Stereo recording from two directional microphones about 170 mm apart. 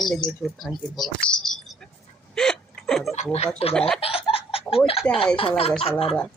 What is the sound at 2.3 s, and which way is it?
Hiccup, 5° left (ahead or behind).